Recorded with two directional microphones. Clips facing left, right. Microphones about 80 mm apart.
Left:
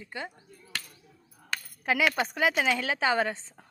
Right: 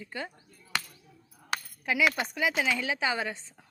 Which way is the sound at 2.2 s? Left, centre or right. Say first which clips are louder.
Left 3 dB; left.